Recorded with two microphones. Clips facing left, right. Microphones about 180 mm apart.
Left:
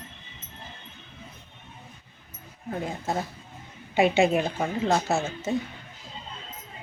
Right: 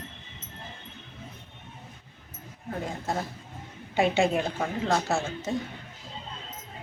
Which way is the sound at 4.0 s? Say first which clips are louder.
Left 3 dB; 5° left (ahead or behind).